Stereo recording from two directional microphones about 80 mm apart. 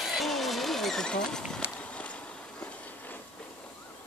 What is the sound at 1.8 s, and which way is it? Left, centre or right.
Walk, centre.